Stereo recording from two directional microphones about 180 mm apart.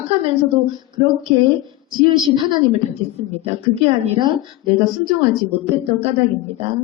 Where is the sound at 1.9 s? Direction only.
25° right (ahead or behind).